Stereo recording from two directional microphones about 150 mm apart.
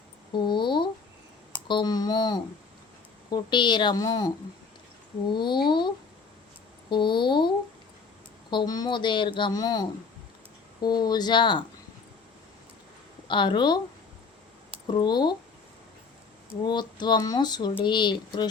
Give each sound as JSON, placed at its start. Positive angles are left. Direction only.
{"t": 0.3, "sound": "a sound", "side_deg": 30}
{"t": 1.6, "sound": "speech", "side_deg": 30}
{"t": 5.3, "sound": "speech", "side_deg": 30}
{"t": 6.9, "sound": "speech", "side_deg": 30}
{"t": 10.8, "sound": "speech", "side_deg": 30}
{"t": 13.2, "sound": "speech", "side_deg": 30}
{"t": 16.6, "sound": "speech", "side_deg": 30}